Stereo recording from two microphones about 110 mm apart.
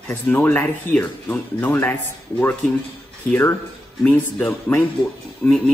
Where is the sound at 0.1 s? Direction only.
20° left (ahead or behind).